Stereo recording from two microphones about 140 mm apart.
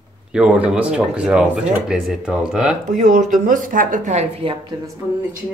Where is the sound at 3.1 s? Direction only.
60° right (ahead or behind); by 4.7 s 40° right (ahead or behind).